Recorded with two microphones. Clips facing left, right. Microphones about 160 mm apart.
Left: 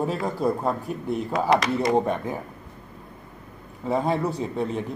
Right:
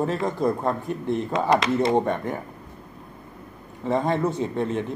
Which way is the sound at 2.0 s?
Centre (ahead or behind).